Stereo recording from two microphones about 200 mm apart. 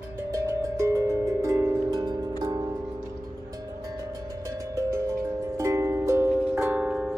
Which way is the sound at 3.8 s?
15° right (ahead or behind).